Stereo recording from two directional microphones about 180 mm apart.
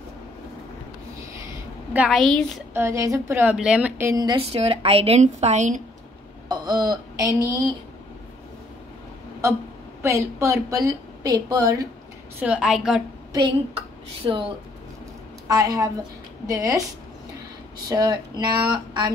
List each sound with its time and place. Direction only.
2.0 s a woman's voice: centre (ahead or behind)
2.7 s a woman's voice: 15° right (ahead or behind)
4.1 s a woman's voice: 25° right (ahead or behind); by 5.8 s 40° right (ahead or behind)
6.5 s speech: 20° right (ahead or behind)
10.0 s a woman's voice: 15° right (ahead or behind)
12.4 s a woman's voice: 5° right (ahead or behind)
13.3 s a woman's voice: 25° right (ahead or behind)
15.4 s a woman's voice: 20° right (ahead or behind)
17.8 s a woman's voice: 20° right (ahead or behind)